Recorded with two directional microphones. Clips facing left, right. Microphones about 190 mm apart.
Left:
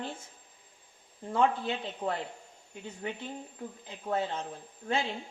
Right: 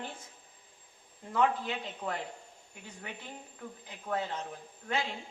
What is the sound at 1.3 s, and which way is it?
Speech, 30° left (ahead or behind).